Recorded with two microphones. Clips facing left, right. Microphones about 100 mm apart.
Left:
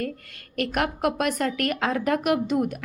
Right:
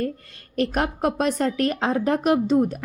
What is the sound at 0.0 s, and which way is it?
A woman's voice, 30° right (ahead or behind).